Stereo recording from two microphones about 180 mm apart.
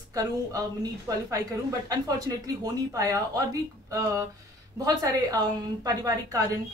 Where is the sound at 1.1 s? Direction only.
20° right (ahead or behind).